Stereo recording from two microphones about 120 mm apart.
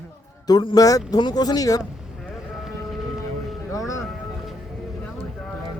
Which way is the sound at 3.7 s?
30° left (ahead or behind).